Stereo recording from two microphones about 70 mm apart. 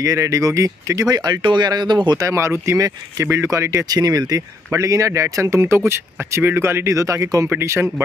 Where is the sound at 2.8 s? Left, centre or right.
Right.